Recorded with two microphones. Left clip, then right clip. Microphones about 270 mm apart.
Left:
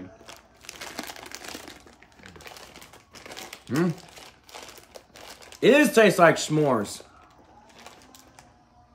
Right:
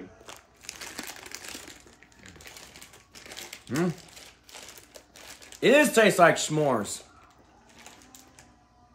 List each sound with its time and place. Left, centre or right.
0.6 s sewing machine: centre
2.2 s typing: centre
3.6 s speech: centre
4.1 s typewriter: left
5.6 s speech: centre